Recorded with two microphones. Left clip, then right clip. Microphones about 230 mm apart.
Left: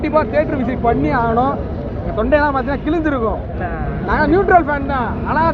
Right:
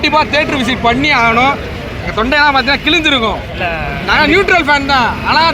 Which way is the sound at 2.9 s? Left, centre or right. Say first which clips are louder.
Right 7 dB; right.